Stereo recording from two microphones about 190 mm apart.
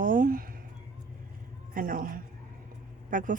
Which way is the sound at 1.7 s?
45° right (ahead or behind).